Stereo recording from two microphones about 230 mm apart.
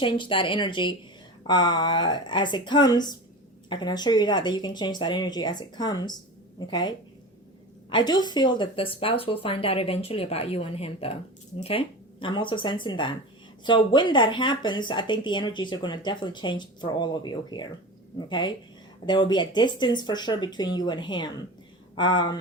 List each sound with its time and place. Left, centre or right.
0.0 s speech: left